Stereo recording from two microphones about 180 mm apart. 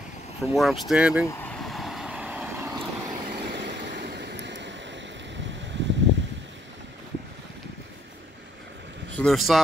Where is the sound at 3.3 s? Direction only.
70° right (ahead or behind).